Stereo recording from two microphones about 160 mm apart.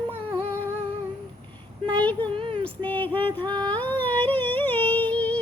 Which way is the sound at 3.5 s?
25° right (ahead or behind).